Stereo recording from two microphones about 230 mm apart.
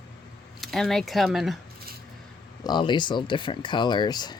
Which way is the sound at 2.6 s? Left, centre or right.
Centre.